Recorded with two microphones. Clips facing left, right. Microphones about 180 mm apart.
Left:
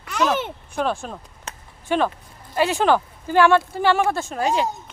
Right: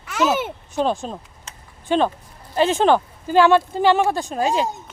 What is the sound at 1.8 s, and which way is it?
Speech, 20° right (ahead or behind).